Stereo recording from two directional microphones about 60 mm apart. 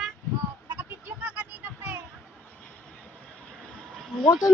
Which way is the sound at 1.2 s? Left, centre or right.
Right.